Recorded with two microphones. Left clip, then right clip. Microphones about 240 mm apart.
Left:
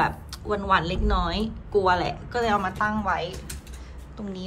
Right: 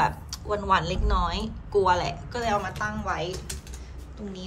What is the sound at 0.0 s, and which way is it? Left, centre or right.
Speech, centre.